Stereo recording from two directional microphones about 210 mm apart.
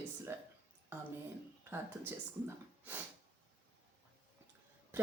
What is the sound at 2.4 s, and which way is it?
Speech, 10° right (ahead or behind).